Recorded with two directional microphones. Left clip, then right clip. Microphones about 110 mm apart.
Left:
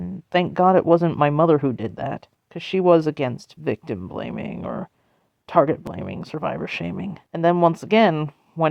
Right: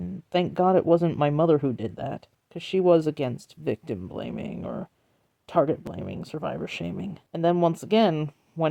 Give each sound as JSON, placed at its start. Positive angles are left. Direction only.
{"t": 0.0, "sound": "speech", "side_deg": -10}
{"t": 8.1, "sound": "speech", "side_deg": -20}